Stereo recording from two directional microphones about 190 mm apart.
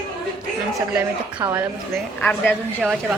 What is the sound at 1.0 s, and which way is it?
Speech, 10° right (ahead or behind).